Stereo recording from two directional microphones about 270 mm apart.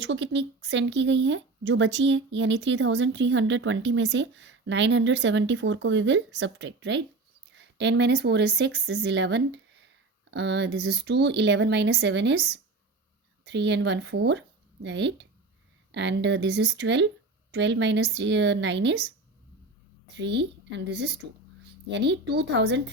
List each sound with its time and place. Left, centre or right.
0.0 s speech: right
20.1 s speech: right